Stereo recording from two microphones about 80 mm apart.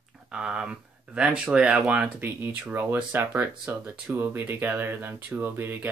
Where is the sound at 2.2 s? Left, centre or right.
Right.